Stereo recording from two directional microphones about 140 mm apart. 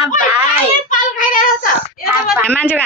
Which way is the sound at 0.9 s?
75° left (ahead or behind).